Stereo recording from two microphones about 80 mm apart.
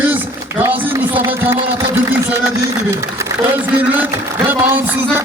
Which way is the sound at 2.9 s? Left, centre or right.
Right.